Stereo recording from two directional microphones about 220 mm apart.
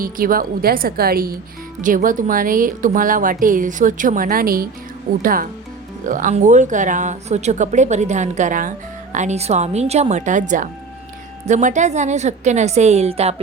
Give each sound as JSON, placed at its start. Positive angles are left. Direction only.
{"t": 0.0, "sound": "speech", "side_deg": -40}